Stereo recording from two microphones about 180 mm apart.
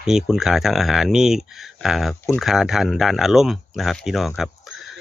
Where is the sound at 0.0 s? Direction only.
5° right (ahead or behind).